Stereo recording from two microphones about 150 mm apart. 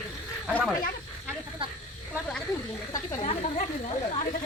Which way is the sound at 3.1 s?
45° left (ahead or behind).